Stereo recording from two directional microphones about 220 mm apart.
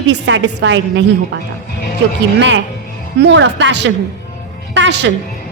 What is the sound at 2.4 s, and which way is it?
A woman's voice, 55° right (ahead or behind).